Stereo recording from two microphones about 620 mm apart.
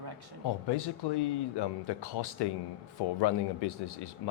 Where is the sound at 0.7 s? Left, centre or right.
Left.